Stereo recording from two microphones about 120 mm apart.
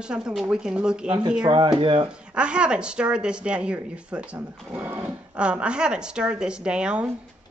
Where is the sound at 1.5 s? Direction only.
40° right (ahead or behind).